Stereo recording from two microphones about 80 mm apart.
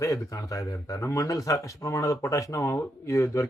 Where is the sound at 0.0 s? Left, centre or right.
Left.